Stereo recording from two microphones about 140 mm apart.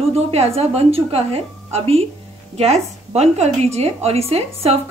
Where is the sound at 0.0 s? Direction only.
45° right (ahead or behind).